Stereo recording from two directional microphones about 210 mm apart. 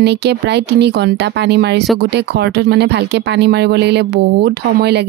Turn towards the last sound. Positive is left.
turn(degrees=-50)  # may be behind; listen again after turning